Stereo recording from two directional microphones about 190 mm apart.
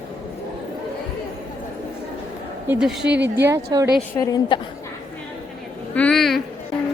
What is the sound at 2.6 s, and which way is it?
Speech, 5° right (ahead or behind).